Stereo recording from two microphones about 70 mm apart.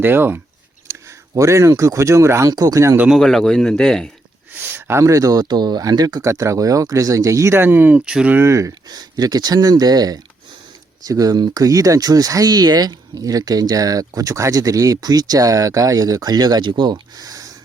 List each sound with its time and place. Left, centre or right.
0.0 s speech: right
1.4 s speech: right
2.5 s speech: right
3.2 s speech: centre
4.6 s speech: right
6.2 s speech: right
7.6 s speech: right
8.3 s speech: right
8.9 s speech: right